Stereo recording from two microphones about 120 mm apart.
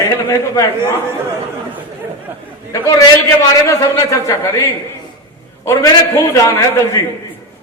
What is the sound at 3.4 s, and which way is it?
A man's voice, 25° left (ahead or behind).